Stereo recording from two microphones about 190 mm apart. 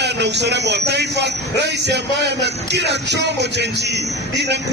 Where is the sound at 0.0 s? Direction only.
65° right (ahead or behind).